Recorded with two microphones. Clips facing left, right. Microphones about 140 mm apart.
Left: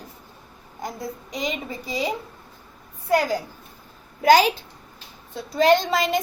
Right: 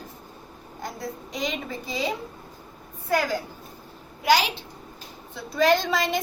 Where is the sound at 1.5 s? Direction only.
10° left (ahead or behind).